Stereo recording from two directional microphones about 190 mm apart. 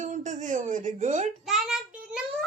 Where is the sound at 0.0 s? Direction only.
40° right (ahead or behind).